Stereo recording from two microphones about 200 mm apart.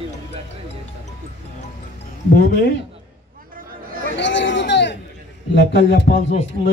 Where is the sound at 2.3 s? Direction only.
60° left (ahead or behind).